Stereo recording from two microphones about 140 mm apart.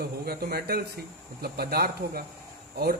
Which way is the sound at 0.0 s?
90° right.